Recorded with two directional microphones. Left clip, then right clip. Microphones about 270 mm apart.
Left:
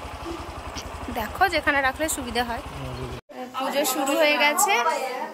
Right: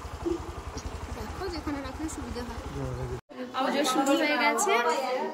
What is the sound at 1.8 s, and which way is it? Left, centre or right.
Speech, left.